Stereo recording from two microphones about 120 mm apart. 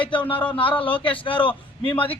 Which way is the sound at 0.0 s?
45° left (ahead or behind).